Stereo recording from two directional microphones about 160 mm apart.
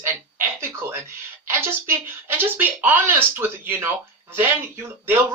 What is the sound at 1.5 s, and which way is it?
Speech, 15° right (ahead or behind).